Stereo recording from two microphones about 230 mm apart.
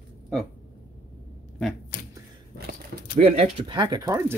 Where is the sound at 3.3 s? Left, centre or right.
Right.